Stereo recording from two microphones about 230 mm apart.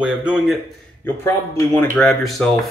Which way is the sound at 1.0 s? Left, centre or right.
Centre.